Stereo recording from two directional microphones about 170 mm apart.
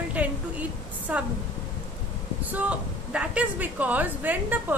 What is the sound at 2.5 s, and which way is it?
A woman's voice, 10° right (ahead or behind).